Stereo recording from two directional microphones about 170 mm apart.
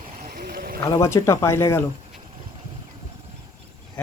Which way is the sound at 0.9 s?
15° left (ahead or behind).